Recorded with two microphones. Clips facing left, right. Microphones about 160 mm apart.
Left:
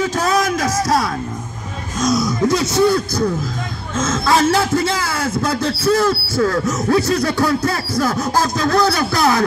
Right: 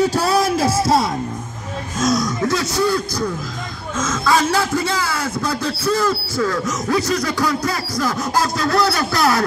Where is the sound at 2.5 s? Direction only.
20° left (ahead or behind).